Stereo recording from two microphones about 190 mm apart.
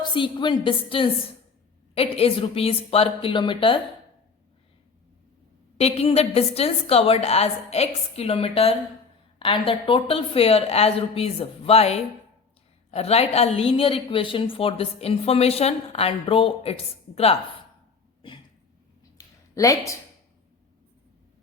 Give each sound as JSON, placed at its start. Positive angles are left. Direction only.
{"t": 0.1, "sound": "a woman's voice", "side_deg": 25}
{"t": 5.7, "sound": "a woman's voice", "side_deg": 30}
{"t": 19.1, "sound": "a sound", "side_deg": 15}